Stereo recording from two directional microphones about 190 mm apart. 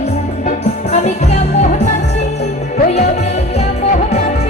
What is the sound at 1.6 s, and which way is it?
Music, 40° left (ahead or behind).